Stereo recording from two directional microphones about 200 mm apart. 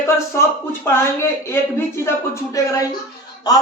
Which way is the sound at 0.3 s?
10° left (ahead or behind).